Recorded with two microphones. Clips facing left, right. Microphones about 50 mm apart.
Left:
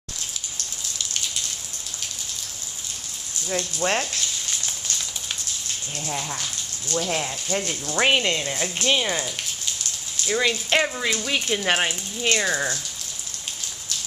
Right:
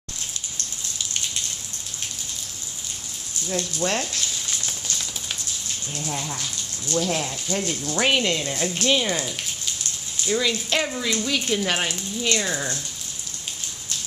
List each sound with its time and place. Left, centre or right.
3.4 s speech: left
6.0 s speech: centre
10.2 s speech: left